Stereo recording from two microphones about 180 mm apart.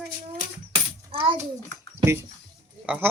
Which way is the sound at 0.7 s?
30° right (ahead or behind).